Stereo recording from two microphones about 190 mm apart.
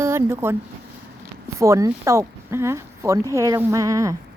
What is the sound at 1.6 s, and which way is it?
Speech, 15° right (ahead or behind).